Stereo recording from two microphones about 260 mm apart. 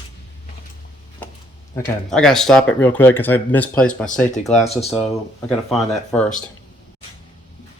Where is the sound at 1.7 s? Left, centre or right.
Centre.